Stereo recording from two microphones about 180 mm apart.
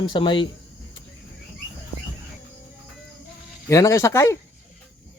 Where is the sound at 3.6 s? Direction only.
15° left (ahead or behind).